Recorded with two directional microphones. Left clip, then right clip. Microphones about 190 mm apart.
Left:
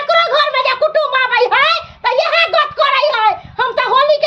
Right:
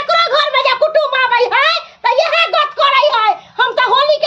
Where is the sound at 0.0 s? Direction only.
20° right (ahead or behind).